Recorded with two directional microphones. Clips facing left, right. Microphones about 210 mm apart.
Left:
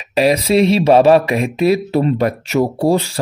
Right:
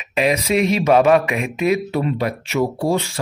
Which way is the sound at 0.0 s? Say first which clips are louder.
Left 5 dB; 35° left (ahead or behind).